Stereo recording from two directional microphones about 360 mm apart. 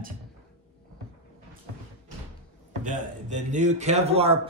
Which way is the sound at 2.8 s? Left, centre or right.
Right.